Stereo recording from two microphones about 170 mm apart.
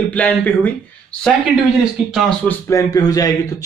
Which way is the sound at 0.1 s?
10° left (ahead or behind).